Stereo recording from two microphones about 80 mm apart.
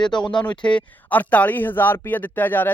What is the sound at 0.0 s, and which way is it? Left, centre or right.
Speech, left.